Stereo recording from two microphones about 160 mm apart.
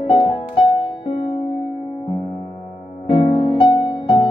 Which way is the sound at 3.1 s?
45° left (ahead or behind).